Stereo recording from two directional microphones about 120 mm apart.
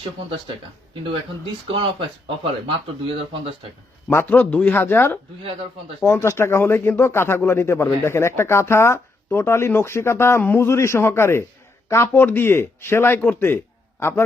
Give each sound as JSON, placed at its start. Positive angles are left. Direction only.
{"t": 1.7, "sound": "speech", "side_deg": -45}
{"t": 4.1, "sound": "speech", "side_deg": 15}